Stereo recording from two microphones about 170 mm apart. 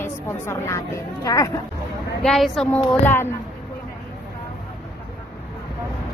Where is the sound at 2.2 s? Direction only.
Centre (ahead or behind).